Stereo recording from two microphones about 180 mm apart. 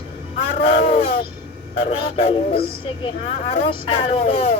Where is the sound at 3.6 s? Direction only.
30° left (ahead or behind).